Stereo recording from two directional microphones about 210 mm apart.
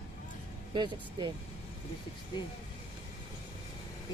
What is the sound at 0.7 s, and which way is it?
Speech, 20° right (ahead or behind).